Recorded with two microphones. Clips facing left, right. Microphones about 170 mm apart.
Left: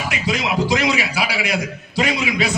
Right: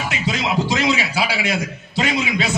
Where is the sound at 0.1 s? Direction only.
25° right (ahead or behind).